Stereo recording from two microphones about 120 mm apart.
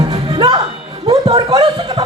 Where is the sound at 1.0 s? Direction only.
40° right (ahead or behind).